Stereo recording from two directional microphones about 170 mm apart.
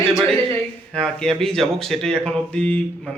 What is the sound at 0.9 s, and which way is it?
Speech, 5° left (ahead or behind).